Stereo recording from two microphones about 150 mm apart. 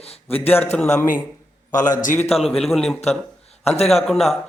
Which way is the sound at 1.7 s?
60° left (ahead or behind).